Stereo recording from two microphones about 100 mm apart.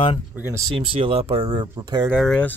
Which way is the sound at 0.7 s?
60° right (ahead or behind).